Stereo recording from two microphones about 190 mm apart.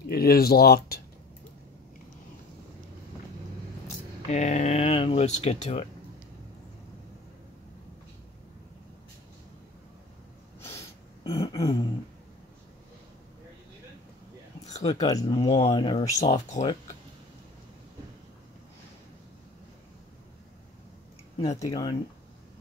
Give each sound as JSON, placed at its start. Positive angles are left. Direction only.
{"t": 0.0, "sound": "speech", "side_deg": 55}
{"t": 4.3, "sound": "speech", "side_deg": 40}
{"t": 11.2, "sound": "a sound", "side_deg": 20}
{"t": 14.8, "sound": "speech", "side_deg": 20}
{"t": 21.5, "sound": "speech", "side_deg": 20}